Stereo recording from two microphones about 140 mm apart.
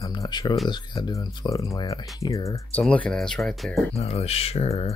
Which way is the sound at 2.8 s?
5° left (ahead or behind).